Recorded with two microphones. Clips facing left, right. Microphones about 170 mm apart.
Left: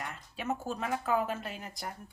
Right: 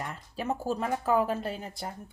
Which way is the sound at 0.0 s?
35° right (ahead or behind).